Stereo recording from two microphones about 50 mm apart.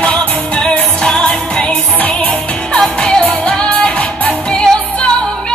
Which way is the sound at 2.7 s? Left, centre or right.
Centre.